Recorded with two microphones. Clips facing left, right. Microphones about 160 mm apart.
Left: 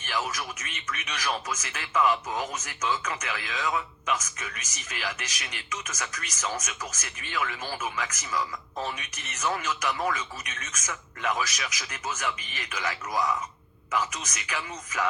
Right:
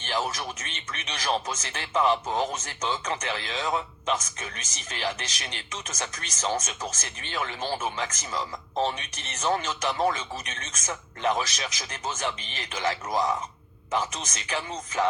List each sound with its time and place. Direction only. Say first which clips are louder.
0.0 s speech: right 2 dB; 30° right (ahead or behind)